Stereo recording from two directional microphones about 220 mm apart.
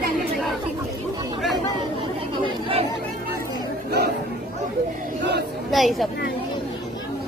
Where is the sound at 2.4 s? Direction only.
25° right (ahead or behind).